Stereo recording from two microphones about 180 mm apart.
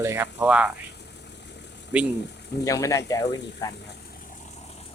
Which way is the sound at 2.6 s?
15° left (ahead or behind).